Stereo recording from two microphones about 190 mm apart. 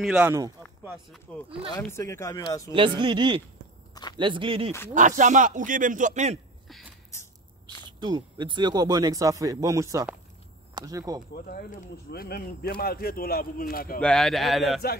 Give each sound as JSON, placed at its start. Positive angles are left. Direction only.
{"t": 0.0, "sound": "speech", "side_deg": -5}
{"t": 1.3, "sound": "speech", "side_deg": 5}
{"t": 2.7, "sound": "speech", "side_deg": -25}
{"t": 4.9, "sound": "speech", "side_deg": -40}
{"t": 8.0, "sound": "speech", "side_deg": -25}
{"t": 11.5, "sound": "speech", "side_deg": 50}
{"t": 14.0, "sound": "speech", "side_deg": 0}